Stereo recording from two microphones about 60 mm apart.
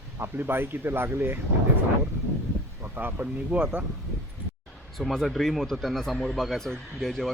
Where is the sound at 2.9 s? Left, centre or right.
Right.